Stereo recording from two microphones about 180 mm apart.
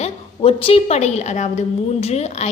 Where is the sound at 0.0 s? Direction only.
30° left (ahead or behind).